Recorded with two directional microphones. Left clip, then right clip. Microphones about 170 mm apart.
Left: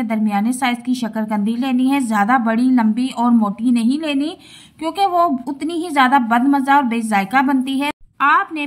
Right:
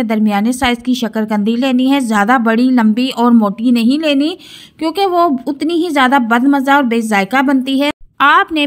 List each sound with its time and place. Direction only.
0.0 s a woman's voice: 35° right (ahead or behind)